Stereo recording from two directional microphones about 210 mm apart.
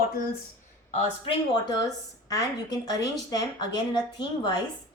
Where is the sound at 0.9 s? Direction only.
20° left (ahead or behind).